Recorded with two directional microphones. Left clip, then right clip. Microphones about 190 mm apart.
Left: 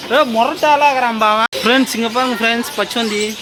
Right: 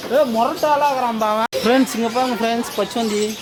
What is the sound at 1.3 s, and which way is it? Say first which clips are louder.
Speech: left 3 dB; centre (ahead or behind).